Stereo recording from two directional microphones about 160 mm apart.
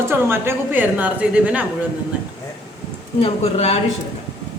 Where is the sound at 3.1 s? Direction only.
35° left (ahead or behind).